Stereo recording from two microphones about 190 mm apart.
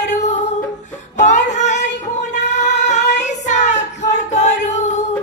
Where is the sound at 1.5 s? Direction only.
40° left (ahead or behind).